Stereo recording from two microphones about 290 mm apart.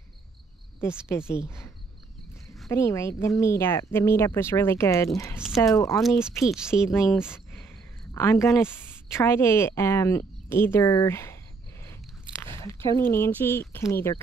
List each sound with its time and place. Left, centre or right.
0.7 s a woman's voice: centre
2.6 s a woman's voice: centre
12.5 s a sound: centre
13.1 s a woman's voice: centre